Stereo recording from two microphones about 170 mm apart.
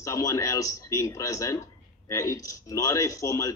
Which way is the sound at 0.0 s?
20° left (ahead or behind).